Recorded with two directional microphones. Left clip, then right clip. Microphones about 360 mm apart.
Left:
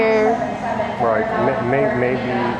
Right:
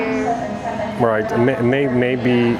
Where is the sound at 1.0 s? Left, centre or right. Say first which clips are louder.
Right 2 dB; right.